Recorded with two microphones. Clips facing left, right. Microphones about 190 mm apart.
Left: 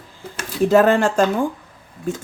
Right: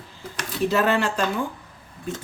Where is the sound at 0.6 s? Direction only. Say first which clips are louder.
Left 7 dB; 50° left (ahead or behind).